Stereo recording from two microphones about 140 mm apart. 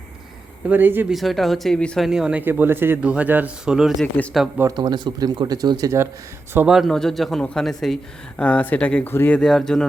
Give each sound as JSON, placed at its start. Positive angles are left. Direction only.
{"t": 0.7, "sound": "speech", "side_deg": -15}
{"t": 1.1, "sound": "speech", "side_deg": 0}
{"t": 2.0, "sound": "speech", "side_deg": -5}
{"t": 4.0, "sound": "speech", "side_deg": 10}
{"t": 4.7, "sound": "speech", "side_deg": -30}
{"t": 6.7, "sound": "speech", "side_deg": 0}